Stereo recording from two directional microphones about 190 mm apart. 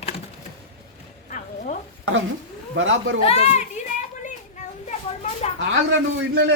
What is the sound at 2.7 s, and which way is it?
Speech, 90° right.